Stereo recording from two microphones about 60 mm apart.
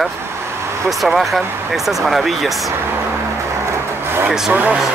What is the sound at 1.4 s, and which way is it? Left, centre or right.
Speech, right.